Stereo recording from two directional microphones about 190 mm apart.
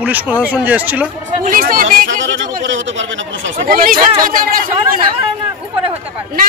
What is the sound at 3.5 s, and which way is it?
Speech, 45° right (ahead or behind).